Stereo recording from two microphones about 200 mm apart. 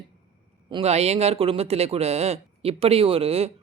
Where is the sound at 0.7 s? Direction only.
30° right (ahead or behind).